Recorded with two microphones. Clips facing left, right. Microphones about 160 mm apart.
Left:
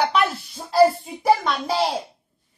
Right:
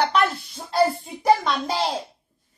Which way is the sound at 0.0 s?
5° left (ahead or behind).